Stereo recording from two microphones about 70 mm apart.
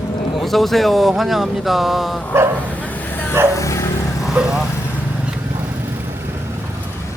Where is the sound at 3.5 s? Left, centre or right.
Left.